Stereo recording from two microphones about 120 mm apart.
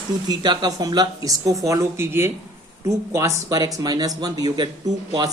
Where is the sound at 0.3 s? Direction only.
35° right (ahead or behind).